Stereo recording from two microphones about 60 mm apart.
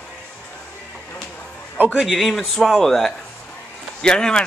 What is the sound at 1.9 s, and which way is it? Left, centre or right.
Speech, centre.